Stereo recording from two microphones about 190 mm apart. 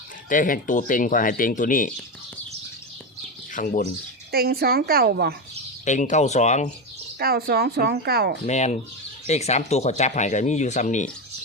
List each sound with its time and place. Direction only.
0.3 s speech: 45° left (ahead or behind)
3.5 s speech: 40° left (ahead or behind)
4.3 s speech: 55° right (ahead or behind)
5.8 s speech: 40° left (ahead or behind)
7.2 s speech: 55° right (ahead or behind)
8.4 s speech: 35° left (ahead or behind)